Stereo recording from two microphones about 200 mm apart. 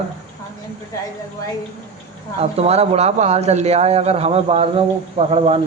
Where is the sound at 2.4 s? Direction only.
30° right (ahead or behind).